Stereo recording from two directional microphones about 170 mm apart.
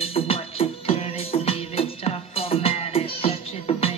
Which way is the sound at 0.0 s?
35° left (ahead or behind).